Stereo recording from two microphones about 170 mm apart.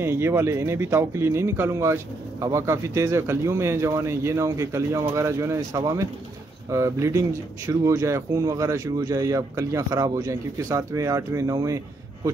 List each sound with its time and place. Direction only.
0.0 s speech: 15° right (ahead or behind)